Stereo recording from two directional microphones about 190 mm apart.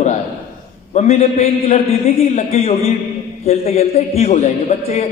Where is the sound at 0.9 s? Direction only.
35° left (ahead or behind).